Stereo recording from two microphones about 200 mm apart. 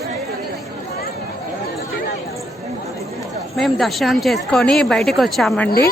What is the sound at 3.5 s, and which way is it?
Speech, centre (ahead or behind).